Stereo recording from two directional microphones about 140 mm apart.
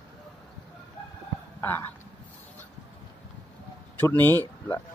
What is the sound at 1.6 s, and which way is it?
Speech, 15° left (ahead or behind).